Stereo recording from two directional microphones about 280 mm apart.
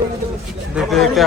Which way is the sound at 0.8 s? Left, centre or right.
Centre.